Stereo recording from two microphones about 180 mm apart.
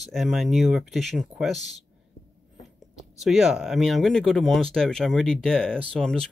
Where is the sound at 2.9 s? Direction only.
Centre (ahead or behind).